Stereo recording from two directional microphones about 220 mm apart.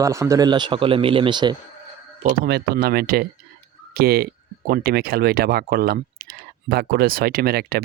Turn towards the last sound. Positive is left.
turn(degrees=-45)  # may be behind; listen again after turning